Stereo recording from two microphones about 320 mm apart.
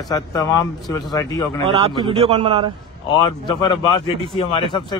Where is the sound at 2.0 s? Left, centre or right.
Centre.